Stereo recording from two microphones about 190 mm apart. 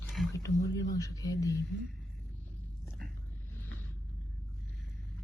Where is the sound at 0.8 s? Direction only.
15° left (ahead or behind).